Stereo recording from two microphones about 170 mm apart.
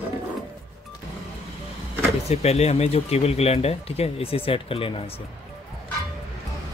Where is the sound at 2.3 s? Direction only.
40° left (ahead or behind).